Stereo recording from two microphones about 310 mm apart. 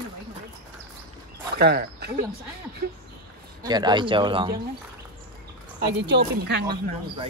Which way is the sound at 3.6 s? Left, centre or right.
Centre.